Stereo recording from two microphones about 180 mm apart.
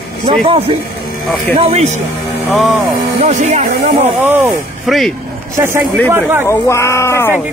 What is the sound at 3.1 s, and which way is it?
Speech, 40° right (ahead or behind).